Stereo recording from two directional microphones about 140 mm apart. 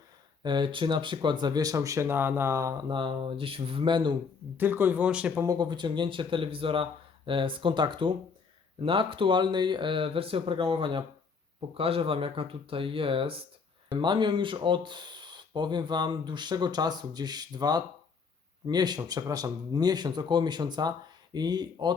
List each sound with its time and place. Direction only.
0.4 s speech: 35° right (ahead or behind)
2.9 s speech: 35° right (ahead or behind)
4.5 s speech: 15° right (ahead or behind)
5.5 s speech: 30° right (ahead or behind)